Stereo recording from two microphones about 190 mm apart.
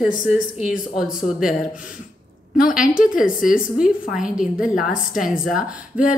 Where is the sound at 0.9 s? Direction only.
5° right (ahead or behind).